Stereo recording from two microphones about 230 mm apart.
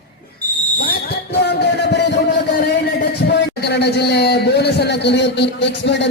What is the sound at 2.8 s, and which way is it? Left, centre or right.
A man's voice, left.